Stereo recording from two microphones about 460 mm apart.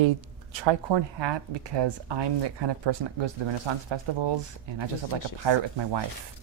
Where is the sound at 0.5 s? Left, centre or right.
Right.